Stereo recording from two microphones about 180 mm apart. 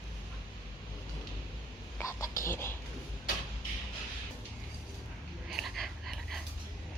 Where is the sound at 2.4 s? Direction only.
15° left (ahead or behind).